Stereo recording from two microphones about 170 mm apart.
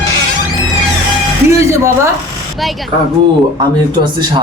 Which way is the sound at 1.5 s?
15° right (ahead or behind).